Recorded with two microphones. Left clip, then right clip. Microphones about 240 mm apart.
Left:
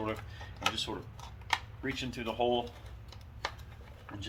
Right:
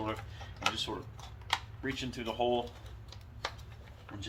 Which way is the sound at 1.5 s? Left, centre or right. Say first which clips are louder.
Left 1 dB; centre.